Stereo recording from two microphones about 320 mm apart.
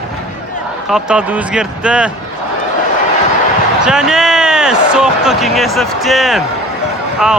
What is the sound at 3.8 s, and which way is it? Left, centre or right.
Speech, centre.